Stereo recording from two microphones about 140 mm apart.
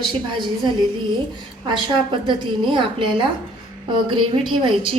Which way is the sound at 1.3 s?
35° right (ahead or behind).